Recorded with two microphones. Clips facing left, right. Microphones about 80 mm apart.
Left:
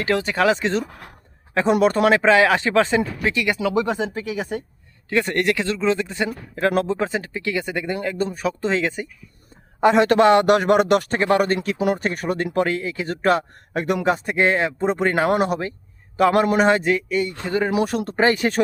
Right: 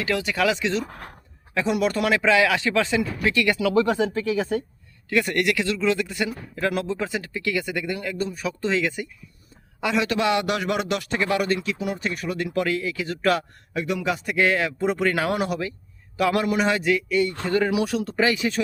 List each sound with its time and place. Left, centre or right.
0.0 s speech: left; by 4.6 s centre
5.0 s speech: left
9.8 s a man's voice: left
13.7 s a man's voice: left
14.1 s speech: left
17.7 s a man's voice: left